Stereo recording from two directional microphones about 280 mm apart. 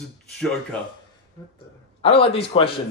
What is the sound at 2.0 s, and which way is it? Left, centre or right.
Speech, left.